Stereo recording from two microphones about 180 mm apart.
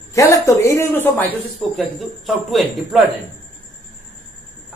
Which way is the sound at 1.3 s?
Centre (ahead or behind).